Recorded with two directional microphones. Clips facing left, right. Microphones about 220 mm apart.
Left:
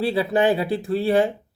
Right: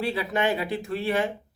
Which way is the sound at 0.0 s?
30° left (ahead or behind).